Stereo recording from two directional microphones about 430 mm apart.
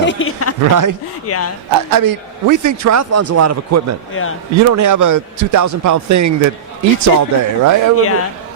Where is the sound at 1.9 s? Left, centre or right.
Right.